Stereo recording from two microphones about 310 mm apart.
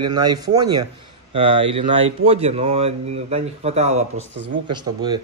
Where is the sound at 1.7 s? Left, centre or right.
Centre.